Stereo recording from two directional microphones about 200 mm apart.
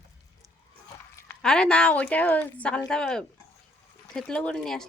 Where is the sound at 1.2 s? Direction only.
5° left (ahead or behind).